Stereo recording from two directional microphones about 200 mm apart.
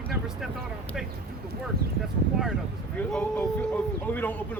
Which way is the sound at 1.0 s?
Centre (ahead or behind).